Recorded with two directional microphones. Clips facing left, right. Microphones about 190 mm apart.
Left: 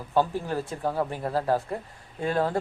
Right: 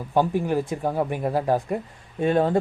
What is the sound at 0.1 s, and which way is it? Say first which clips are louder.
Speech: right 4 dB; 15° right (ahead or behind).